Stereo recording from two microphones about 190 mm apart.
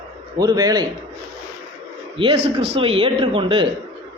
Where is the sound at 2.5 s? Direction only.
30° right (ahead or behind).